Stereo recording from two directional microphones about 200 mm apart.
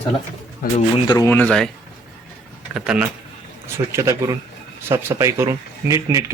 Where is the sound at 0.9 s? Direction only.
20° left (ahead or behind).